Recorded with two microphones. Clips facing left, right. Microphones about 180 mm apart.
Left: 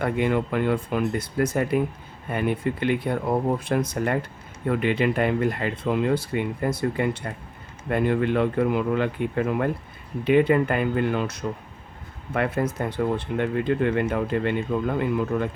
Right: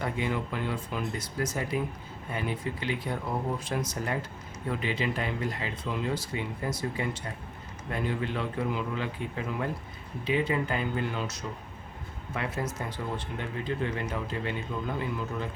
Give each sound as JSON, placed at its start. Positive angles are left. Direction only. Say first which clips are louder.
{"t": 0.0, "sound": "speech", "louder": "left 8 dB", "side_deg": 60}